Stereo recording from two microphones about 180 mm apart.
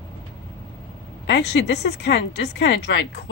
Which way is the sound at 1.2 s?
70° left (ahead or behind).